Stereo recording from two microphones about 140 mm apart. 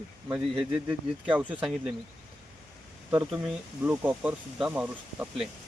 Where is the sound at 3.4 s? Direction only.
15° right (ahead or behind).